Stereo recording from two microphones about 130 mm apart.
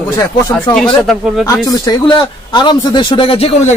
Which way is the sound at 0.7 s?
5° left (ahead or behind).